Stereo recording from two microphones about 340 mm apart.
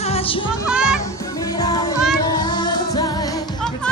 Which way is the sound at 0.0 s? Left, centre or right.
Centre.